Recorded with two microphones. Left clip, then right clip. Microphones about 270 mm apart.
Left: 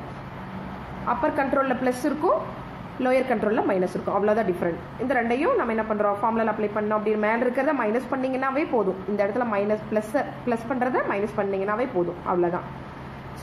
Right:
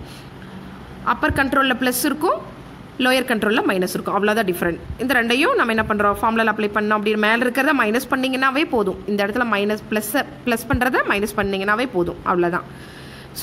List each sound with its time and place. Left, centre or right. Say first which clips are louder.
1.0 s speech: right 5 dB; right